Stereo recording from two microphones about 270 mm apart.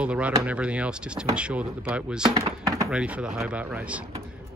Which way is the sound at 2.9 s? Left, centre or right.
Centre.